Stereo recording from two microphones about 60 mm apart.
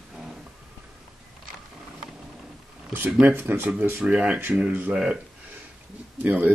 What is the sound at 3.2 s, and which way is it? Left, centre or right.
Speech, right.